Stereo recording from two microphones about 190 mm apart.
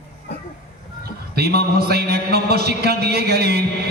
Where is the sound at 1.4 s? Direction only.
55° right (ahead or behind).